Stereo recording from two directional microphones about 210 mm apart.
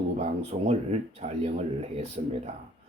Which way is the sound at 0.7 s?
30° right (ahead or behind).